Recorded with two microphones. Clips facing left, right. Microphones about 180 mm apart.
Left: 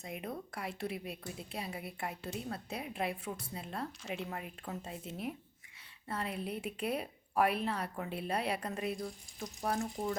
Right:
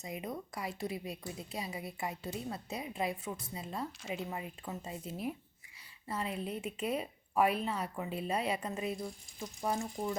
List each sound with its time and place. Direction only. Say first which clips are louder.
0.0 s a woman's voice: right 1 dB; 5° right (ahead or behind)
6.1 s a woman's voice: right 1 dB; centre (ahead or behind)